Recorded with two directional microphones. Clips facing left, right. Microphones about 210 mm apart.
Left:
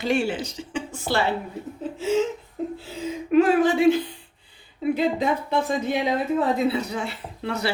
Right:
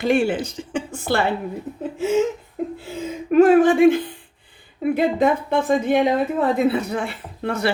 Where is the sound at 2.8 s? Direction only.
50° right (ahead or behind).